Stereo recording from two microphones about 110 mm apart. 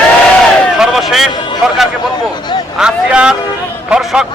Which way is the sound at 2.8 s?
10° right (ahead or behind).